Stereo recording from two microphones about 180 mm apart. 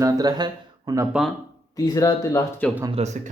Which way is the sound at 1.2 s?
5° right (ahead or behind).